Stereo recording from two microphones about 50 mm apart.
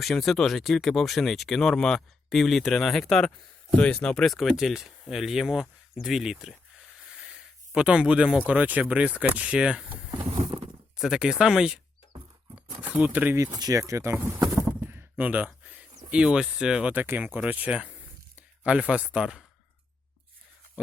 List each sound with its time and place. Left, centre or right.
0.0 s speech: centre
3.8 s speech: left
4.3 s speech: centre
6.7 s a sound: centre
8.4 s speech: right
10.9 s speech: centre
12.5 s horse: right
13.3 s speech: right
14.8 s a sound: right
15.2 s speech: right
15.6 s a sound: right
16.2 s speech: centre
16.9 s speech: right
18.6 s speech: centre